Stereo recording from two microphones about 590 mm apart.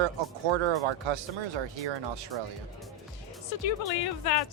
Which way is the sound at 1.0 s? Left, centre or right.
Right.